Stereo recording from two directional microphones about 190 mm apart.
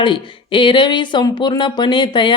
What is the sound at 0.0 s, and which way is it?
Speech, 25° left (ahead or behind).